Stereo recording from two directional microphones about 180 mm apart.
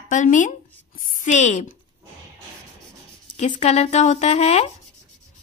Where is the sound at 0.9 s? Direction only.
50° left (ahead or behind).